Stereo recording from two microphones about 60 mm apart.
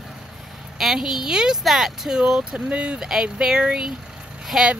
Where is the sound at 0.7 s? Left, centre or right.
Centre.